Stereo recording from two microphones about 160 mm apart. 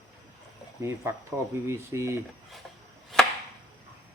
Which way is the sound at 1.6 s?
15° right (ahead or behind).